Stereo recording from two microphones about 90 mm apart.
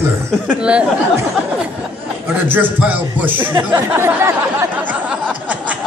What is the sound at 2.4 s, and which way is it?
A man's voice, 20° right (ahead or behind).